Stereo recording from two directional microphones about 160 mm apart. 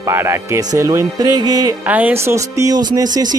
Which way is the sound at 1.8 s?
10° right (ahead or behind).